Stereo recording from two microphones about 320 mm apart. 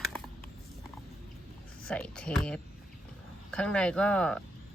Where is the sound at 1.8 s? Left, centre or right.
Centre.